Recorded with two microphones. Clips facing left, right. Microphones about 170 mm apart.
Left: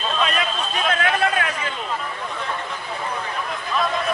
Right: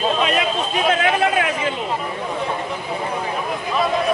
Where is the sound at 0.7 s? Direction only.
10° right (ahead or behind).